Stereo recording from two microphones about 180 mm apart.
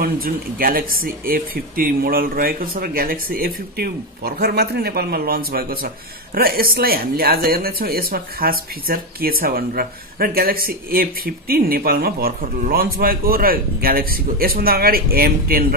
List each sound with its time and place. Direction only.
0.0 s speech: 55° right (ahead or behind)